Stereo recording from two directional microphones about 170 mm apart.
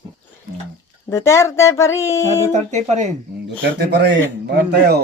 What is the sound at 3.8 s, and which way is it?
Speech, 80° right.